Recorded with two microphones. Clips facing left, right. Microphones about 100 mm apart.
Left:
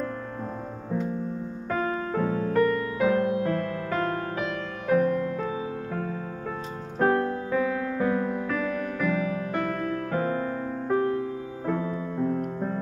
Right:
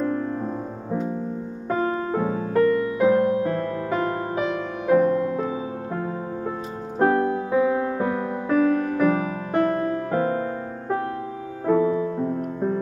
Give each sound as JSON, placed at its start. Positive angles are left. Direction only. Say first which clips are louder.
{"t": 1.7, "sound": "music", "louder": "right 4 dB", "side_deg": -25}
{"t": 7.0, "sound": "keyboard", "louder": "right 4 dB", "side_deg": -15}
{"t": 8.5, "sound": "music", "louder": "right 8 dB", "side_deg": -35}
{"t": 11.6, "sound": "music", "louder": "right 10 dB", "side_deg": -20}